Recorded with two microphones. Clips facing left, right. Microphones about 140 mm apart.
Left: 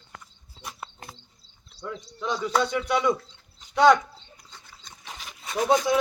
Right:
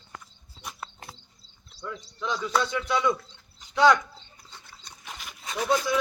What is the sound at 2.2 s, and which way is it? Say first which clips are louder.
Speech: left 2 dB; 15° left (ahead or behind).